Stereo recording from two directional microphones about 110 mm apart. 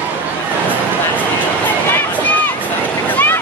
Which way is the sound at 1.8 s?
15° left (ahead or behind).